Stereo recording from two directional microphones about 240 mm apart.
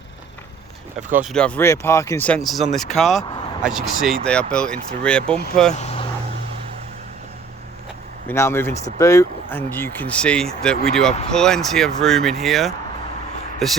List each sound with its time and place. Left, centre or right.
1.1 s speech: centre
5.7 s vehicle: left
8.3 s speech: centre